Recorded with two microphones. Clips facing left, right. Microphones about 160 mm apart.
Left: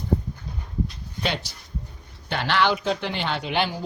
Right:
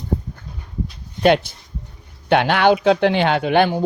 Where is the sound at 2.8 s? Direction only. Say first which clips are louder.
Right 11 dB; 75° right (ahead or behind); by 3.8 s 55° right (ahead or behind).